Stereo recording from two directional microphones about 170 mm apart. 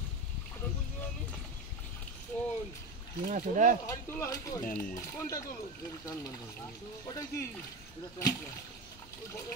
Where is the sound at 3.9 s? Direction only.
20° left (ahead or behind).